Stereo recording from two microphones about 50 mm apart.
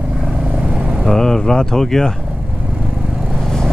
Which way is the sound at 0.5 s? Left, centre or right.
Right.